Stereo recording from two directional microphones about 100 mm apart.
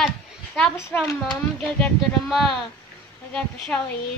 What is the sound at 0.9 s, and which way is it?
Speech, 25° left (ahead or behind).